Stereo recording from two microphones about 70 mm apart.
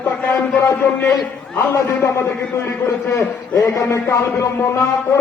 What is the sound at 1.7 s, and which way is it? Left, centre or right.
A man's voice, left.